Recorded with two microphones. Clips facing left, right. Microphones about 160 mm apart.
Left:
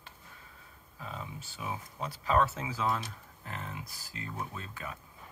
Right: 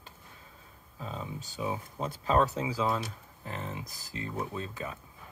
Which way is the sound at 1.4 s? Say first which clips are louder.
Right 8 dB; 25° right (ahead or behind).